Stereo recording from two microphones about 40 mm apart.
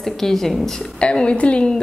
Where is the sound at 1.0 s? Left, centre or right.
Left.